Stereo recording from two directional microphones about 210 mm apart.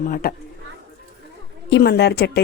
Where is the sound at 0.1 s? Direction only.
45° left (ahead or behind).